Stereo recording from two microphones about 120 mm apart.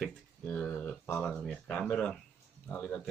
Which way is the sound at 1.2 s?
Centre (ahead or behind).